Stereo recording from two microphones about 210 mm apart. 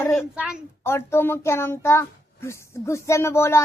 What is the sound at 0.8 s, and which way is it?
A child's voice, 10° left (ahead or behind).